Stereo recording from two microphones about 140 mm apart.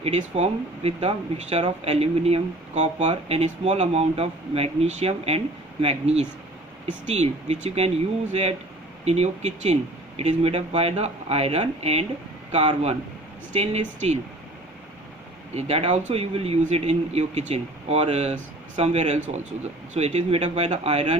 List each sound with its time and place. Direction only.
0.0 s speech: 50° right (ahead or behind)
15.5 s speech: 50° right (ahead or behind)